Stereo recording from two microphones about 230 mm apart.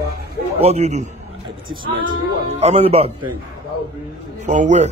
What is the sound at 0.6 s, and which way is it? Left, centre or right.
Speech, right.